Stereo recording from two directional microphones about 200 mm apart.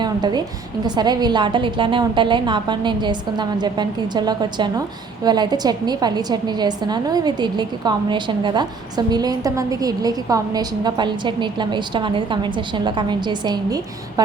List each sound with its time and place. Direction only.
0.0 s a woman's voice: 20° right (ahead or behind)